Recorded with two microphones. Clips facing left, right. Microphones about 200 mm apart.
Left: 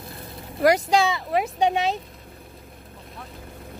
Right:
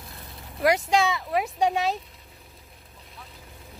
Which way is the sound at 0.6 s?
Centre (ahead or behind).